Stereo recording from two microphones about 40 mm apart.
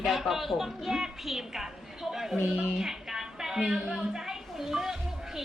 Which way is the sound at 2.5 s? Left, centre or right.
Centre.